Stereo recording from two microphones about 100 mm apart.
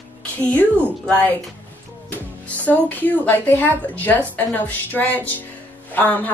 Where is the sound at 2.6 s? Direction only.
15° left (ahead or behind).